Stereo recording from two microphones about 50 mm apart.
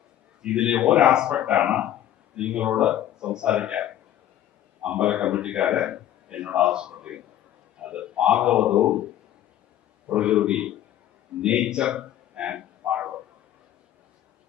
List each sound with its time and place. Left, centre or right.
0.4 s a man's voice: centre
10.2 s a man's voice: centre
12.9 s tick-tock: right